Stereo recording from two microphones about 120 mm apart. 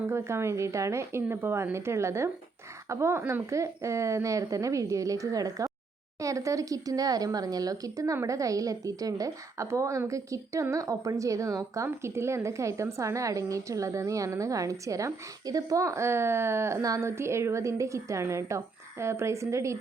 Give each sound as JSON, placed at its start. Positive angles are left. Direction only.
{"t": 0.1, "sound": "speech", "side_deg": -20}